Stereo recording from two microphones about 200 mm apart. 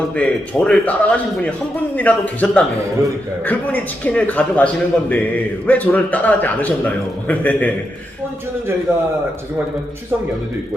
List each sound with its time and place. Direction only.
0.2 s a man's voice: 5° left (ahead or behind)